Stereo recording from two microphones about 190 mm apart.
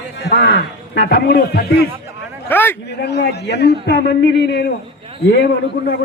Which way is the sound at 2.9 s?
60° left (ahead or behind).